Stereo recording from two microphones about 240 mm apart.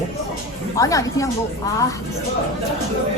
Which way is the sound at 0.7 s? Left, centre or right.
Centre.